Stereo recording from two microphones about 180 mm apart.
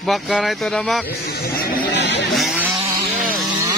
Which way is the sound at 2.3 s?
Centre (ahead or behind).